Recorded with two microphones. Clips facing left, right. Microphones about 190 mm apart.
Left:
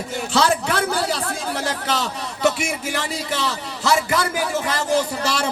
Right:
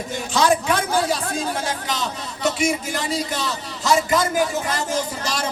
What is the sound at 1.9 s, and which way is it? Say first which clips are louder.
A man's voice: left 2 dB; 70° left (ahead or behind).